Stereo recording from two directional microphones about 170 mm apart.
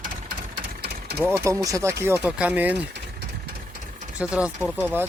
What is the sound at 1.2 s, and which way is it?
Speech, 15° right (ahead or behind).